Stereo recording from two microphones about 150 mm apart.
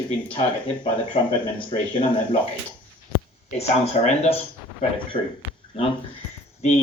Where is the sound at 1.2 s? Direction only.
40° left (ahead or behind).